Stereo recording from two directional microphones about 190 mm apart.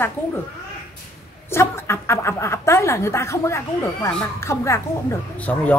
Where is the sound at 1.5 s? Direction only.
15° left (ahead or behind).